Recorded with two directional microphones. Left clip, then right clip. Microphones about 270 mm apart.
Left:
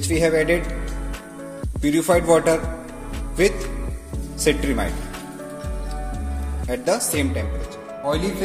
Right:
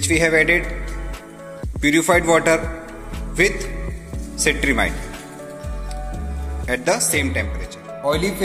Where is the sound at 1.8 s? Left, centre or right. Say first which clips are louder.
Right 3 dB; centre.